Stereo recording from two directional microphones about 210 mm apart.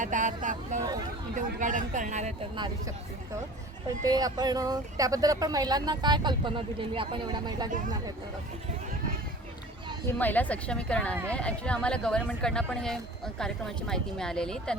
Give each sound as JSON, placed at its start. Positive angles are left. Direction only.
{"t": 0.0, "sound": "speech", "side_deg": -35}
{"t": 3.8, "sound": "speech", "side_deg": -15}
{"t": 10.1, "sound": "speech", "side_deg": 10}